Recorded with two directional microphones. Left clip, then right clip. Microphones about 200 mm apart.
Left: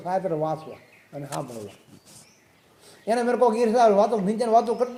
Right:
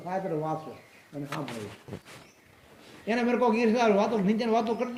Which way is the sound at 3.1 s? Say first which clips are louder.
Left 5 dB; 40° left (ahead or behind).